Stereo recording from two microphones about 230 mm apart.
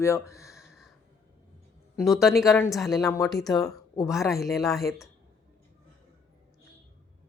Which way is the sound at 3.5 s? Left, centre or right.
Centre.